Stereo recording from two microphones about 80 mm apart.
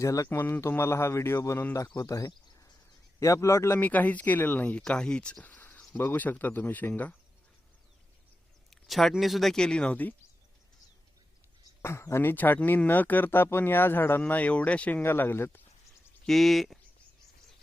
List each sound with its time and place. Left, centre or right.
0.0 s a man's voice: left
0.3 s speech: left
2.0 s speech: left
3.8 s speech: left
8.7 s a sound: centre
9.1 s speech: centre
11.8 s speech: left; by 15.0 s centre
15.0 s speech: left
16.2 s speech: centre